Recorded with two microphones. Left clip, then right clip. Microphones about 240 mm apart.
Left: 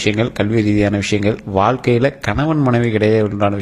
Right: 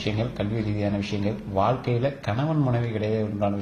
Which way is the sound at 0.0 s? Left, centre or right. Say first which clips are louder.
Left 11 dB; left.